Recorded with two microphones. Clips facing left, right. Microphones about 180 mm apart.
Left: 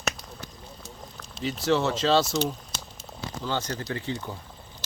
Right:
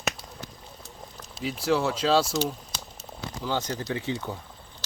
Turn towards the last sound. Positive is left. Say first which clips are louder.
# right 2 dB
turn(degrees=-10)  # may be behind; listen again after turning